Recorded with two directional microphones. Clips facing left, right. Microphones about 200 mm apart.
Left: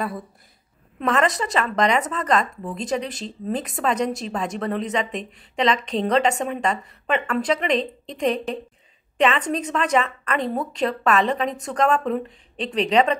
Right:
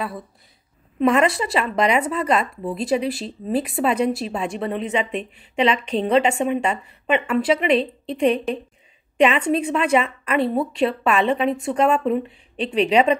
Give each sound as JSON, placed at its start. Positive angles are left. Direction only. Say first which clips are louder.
{"t": 1.0, "sound": "speech", "louder": "right 4 dB", "side_deg": -10}
{"t": 12.6, "sound": "speech", "louder": "right 4 dB", "side_deg": 35}
{"t": 12.9, "sound": "speech", "louder": "right 1 dB", "side_deg": -10}